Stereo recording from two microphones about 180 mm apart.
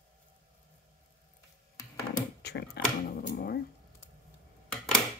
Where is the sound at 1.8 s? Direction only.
20° left (ahead or behind).